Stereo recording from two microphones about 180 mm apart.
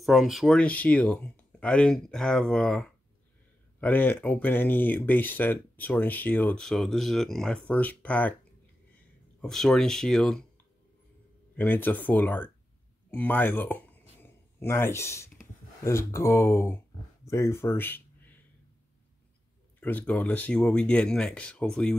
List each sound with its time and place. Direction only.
0.0 s speech: centre (ahead or behind)
11.5 s speech: 10° left (ahead or behind)
13.1 s a sound: 10° left (ahead or behind)
15.8 s speech: 15° left (ahead or behind)
19.8 s speech: 10° left (ahead or behind)